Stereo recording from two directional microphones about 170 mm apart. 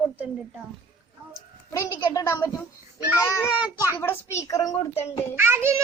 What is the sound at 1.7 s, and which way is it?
A child's voice, 20° left (ahead or behind).